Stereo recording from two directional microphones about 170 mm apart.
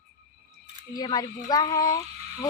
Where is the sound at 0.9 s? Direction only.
25° left (ahead or behind).